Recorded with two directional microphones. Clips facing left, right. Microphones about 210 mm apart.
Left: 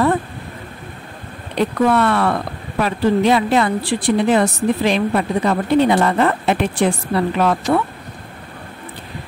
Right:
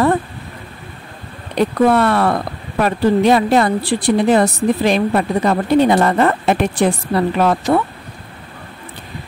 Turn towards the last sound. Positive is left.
turn(degrees=-35)  # may be behind; listen again after turning